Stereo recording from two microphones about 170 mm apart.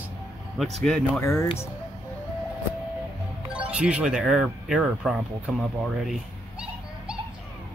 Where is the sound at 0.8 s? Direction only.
5° left (ahead or behind).